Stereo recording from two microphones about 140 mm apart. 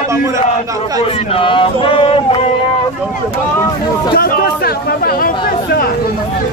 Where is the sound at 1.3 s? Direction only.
40° left (ahead or behind).